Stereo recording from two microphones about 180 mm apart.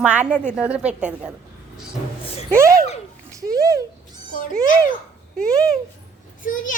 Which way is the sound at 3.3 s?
20° right (ahead or behind).